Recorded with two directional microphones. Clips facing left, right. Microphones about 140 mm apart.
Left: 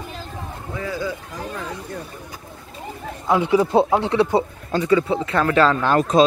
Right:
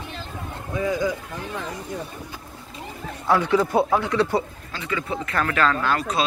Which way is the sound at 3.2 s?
20° left (ahead or behind).